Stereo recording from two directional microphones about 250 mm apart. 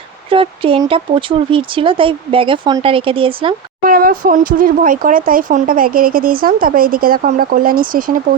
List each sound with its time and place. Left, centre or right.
0.3 s speech: right
3.8 s speech: right